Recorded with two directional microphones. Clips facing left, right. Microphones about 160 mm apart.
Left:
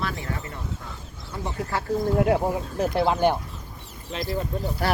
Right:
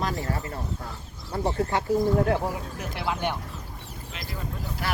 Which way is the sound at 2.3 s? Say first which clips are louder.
Left 4 dB; 25° left (ahead or behind).